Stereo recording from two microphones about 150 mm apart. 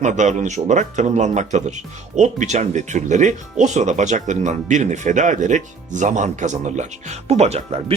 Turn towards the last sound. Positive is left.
turn(degrees=-45)  # may be behind; listen again after turning